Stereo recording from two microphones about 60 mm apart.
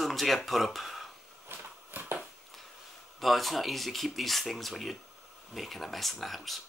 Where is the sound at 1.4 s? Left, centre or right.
Right.